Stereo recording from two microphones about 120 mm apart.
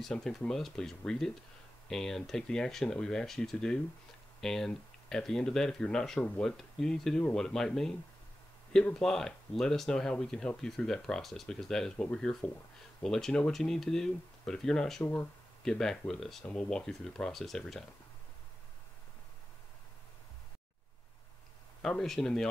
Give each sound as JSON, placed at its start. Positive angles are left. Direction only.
{"t": 0.0, "sound": "speech", "side_deg": 5}
{"t": 21.8, "sound": "speech", "side_deg": 5}